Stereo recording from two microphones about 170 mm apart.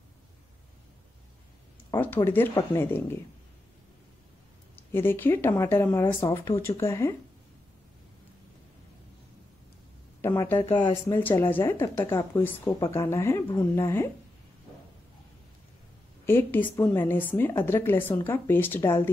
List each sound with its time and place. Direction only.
1.9 s a woman's voice: 10° left (ahead or behind)
4.7 s a woman's voice: 15° left (ahead or behind)
10.2 s a woman's voice: 15° left (ahead or behind)
16.3 s a woman's voice: 10° left (ahead or behind)